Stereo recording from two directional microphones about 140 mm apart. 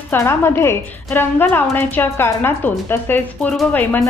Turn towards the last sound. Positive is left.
turn(degrees=0)  # may be behind; listen again after turning